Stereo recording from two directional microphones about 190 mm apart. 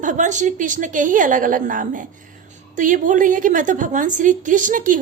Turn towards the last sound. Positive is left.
turn(degrees=-45)  # may be behind; listen again after turning